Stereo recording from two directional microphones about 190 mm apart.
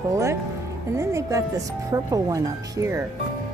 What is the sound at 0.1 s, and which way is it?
Speech, 15° right (ahead or behind).